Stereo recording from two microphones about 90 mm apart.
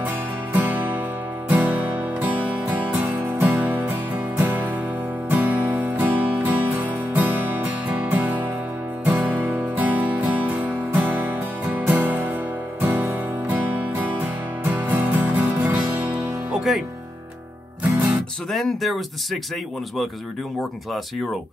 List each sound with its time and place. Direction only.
0.0 s music: 20° right (ahead or behind)
18.1 s speech: centre (ahead or behind)